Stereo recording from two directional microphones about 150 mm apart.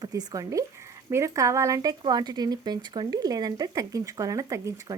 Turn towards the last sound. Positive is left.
turn(degrees=-20)  # may be behind; listen again after turning